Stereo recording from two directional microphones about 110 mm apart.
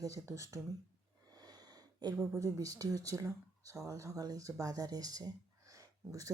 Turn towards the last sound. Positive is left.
turn(degrees=-30)  # may be behind; listen again after turning